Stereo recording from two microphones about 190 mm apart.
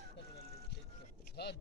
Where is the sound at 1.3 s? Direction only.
60° left (ahead or behind).